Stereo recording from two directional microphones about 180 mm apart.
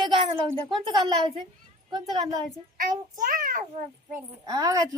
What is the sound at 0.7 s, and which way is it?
Speech, 25° right (ahead or behind).